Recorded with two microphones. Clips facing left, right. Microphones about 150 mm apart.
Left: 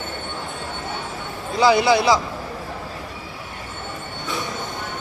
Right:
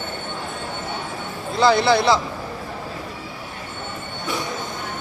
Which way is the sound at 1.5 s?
10° left (ahead or behind).